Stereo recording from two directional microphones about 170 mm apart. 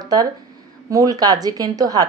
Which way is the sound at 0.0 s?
20° right (ahead or behind).